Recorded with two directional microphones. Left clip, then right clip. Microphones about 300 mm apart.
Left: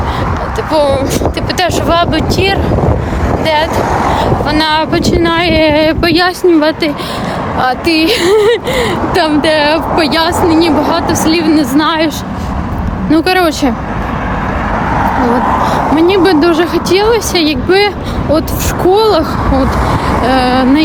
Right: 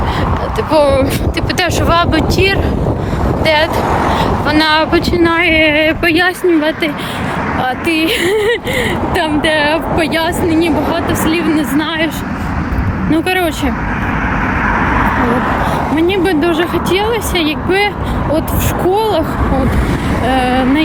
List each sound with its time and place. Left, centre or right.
0.7 s speech: centre
3.8 s vehicle: left
4.2 s speech: centre
5.5 s speech: centre
13.1 s speech: centre
14.8 s vehicle: left
16.0 s speech: centre